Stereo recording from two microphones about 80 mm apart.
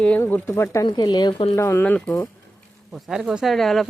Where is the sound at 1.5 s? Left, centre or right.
Left.